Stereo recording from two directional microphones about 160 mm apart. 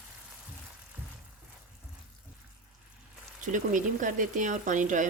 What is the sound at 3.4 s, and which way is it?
Speech, 55° right (ahead or behind).